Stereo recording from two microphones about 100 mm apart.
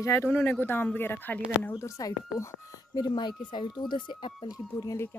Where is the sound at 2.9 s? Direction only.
45° left (ahead or behind).